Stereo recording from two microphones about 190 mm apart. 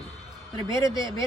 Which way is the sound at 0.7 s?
15° left (ahead or behind).